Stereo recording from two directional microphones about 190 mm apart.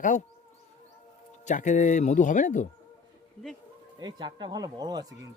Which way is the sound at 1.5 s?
40° left (ahead or behind).